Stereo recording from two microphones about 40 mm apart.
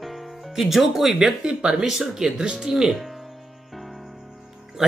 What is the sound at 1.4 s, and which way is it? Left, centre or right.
Speech, right.